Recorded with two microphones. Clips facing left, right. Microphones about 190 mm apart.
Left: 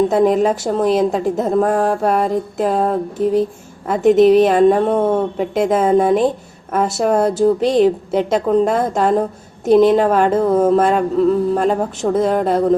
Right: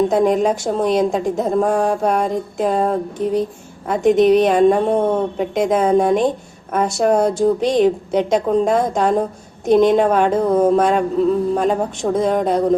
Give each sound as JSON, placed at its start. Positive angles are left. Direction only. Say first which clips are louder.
{"t": 0.1, "sound": "a woman's voice", "louder": "left 1 dB", "side_deg": 5}